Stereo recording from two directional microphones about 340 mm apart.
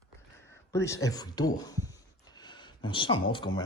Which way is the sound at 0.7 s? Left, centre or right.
Centre.